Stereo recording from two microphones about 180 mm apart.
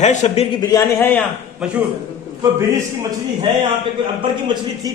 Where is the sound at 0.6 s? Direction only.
15° left (ahead or behind).